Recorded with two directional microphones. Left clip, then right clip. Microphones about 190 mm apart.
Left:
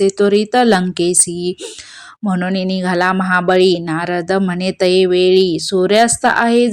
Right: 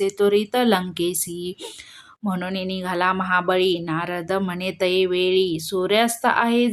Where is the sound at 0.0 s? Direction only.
30° left (ahead or behind).